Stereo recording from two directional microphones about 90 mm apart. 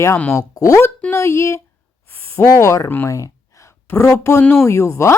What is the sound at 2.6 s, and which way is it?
Speech, 35° left (ahead or behind).